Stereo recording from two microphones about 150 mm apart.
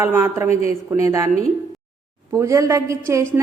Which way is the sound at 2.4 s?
20° right (ahead or behind).